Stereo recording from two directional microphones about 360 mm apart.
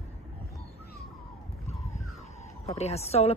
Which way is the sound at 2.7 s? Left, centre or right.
Centre.